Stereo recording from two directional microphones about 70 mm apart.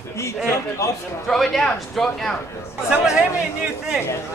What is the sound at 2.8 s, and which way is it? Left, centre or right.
Speech, centre.